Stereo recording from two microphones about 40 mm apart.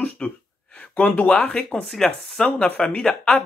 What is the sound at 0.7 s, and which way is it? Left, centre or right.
Speech, left.